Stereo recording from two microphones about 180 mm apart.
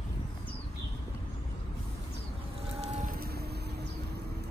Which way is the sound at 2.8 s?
40° right (ahead or behind).